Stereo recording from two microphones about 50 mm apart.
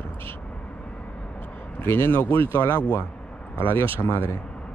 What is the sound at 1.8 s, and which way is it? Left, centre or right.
Speech, left.